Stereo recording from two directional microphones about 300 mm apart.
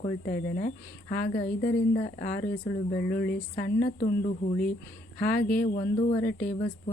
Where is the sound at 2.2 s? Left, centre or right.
Centre.